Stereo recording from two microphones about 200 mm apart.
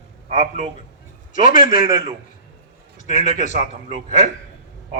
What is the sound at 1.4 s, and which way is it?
Speech, 45° left (ahead or behind).